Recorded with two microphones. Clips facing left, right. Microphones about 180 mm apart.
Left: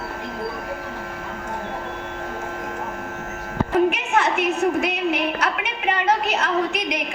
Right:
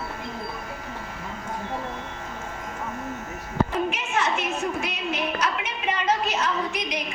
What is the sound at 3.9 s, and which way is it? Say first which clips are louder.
A woman's voice: left 5 dB; 60° left (ahead or behind).